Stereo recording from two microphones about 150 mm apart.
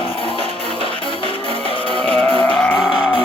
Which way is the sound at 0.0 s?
35° left (ahead or behind).